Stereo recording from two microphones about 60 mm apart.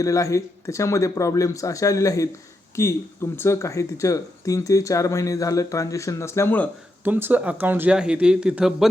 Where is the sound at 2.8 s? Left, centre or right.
Left.